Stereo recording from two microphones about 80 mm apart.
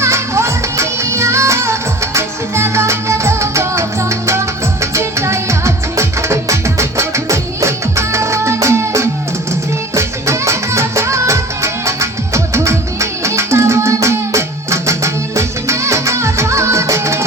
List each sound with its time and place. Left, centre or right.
0.0 s music: right